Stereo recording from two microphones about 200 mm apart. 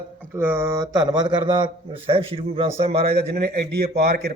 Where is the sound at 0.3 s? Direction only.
10° right (ahead or behind); by 3.2 s 30° right (ahead or behind).